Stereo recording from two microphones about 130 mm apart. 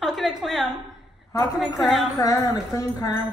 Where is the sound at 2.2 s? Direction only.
25° left (ahead or behind).